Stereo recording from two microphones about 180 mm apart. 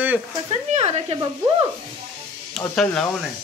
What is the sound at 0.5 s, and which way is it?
Speech, 40° right (ahead or behind).